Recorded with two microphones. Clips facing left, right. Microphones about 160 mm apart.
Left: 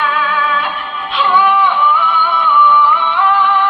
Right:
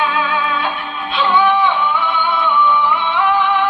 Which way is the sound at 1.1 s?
25° right (ahead or behind).